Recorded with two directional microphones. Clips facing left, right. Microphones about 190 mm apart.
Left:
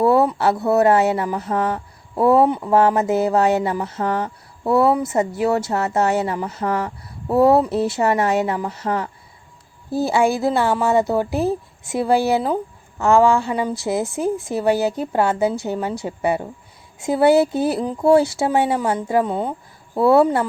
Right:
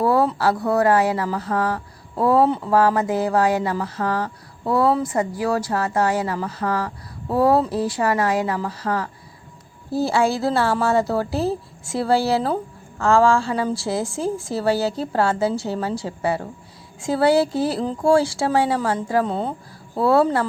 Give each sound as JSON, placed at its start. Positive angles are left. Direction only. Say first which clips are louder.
{"t": 0.0, "sound": "a sound", "louder": "left 3 dB", "side_deg": 25}
{"t": 0.3, "sound": "speech", "louder": "left 2 dB", "side_deg": 25}
{"t": 20.0, "sound": "speech", "louder": "left 3 dB", "side_deg": 20}